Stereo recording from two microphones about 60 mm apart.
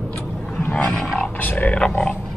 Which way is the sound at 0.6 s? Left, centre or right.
Left.